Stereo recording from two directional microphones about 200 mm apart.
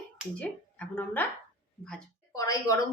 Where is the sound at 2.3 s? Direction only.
15° left (ahead or behind).